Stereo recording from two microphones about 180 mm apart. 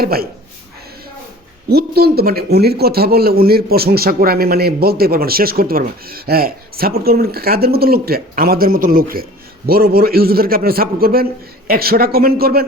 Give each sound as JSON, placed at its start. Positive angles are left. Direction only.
{"t": 0.0, "sound": "a man's voice", "side_deg": -55}
{"t": 1.7, "sound": "a man's voice", "side_deg": -60}